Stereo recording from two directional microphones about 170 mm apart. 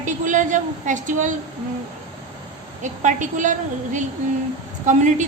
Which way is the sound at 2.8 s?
45° right (ahead or behind).